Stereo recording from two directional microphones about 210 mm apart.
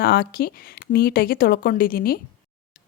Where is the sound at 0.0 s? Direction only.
45° left (ahead or behind).